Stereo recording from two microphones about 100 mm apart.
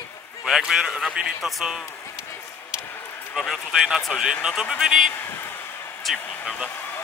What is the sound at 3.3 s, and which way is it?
Speech, centre (ahead or behind).